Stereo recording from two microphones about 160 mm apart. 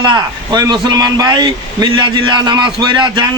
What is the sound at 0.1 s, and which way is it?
Speech, 25° right (ahead or behind).